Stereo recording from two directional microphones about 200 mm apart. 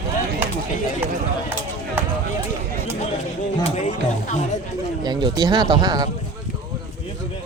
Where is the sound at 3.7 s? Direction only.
35° left (ahead or behind).